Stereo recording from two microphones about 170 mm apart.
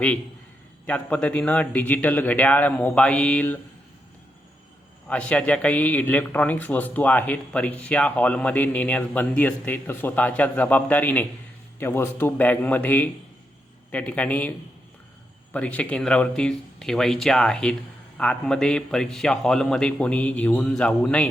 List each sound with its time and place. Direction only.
0.9 s a man's voice: 5° left (ahead or behind)
5.0 s a man's voice: 10° left (ahead or behind)
15.5 s a man's voice: 5° left (ahead or behind)